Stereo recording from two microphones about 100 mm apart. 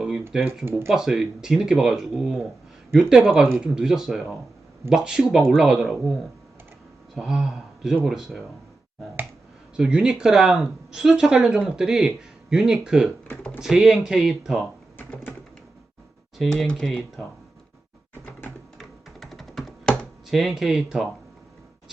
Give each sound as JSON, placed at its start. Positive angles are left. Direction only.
{"t": 0.0, "sound": "typing", "side_deg": -10}
{"t": 0.9, "sound": "speech", "side_deg": -5}
{"t": 7.2, "sound": "a man's voice", "side_deg": -5}
{"t": 9.7, "sound": "speech", "side_deg": -5}
{"t": 14.9, "sound": "typing", "side_deg": 20}
{"t": 16.4, "sound": "speech", "side_deg": 5}
{"t": 18.1, "sound": "a sound", "side_deg": 20}
{"t": 18.8, "sound": "computer keyboard", "side_deg": 0}
{"t": 20.3, "sound": "speech", "side_deg": 0}